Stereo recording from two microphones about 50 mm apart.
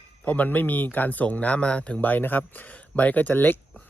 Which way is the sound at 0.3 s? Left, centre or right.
Left.